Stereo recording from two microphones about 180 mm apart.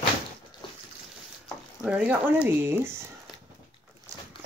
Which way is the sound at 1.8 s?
10° right (ahead or behind).